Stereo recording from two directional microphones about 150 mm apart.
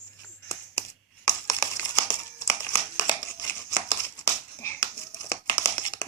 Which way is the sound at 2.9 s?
25° left (ahead or behind).